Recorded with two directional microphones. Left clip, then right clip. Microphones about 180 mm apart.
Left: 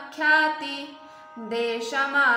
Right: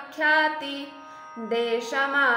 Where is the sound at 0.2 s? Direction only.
35° right (ahead or behind).